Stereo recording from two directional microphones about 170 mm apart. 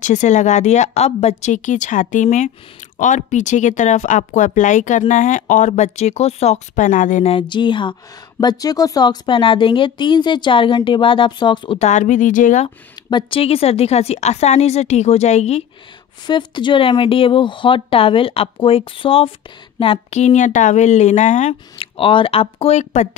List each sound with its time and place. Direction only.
0.0 s speech: 45° left (ahead or behind)
7.3 s a woman's voice: 30° left (ahead or behind)
11.8 s speech: 45° left (ahead or behind)
12.6 s a woman's voice: 30° left (ahead or behind)
16.3 s a woman's voice: 25° left (ahead or behind)